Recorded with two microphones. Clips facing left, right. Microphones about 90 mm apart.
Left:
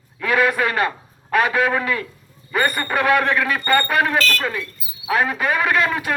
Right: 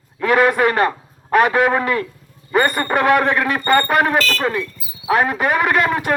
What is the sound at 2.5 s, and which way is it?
Speech, 25° right (ahead or behind).